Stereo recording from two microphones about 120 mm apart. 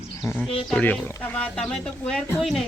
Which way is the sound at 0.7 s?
15° left (ahead or behind).